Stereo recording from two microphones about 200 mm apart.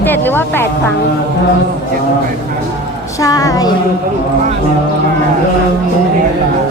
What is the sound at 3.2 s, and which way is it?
Speech, 15° left (ahead or behind).